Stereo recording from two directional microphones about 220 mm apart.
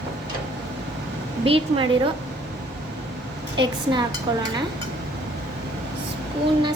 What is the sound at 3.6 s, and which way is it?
Speech, 20° right (ahead or behind).